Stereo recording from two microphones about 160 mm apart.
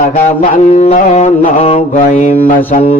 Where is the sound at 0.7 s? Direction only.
45° left (ahead or behind).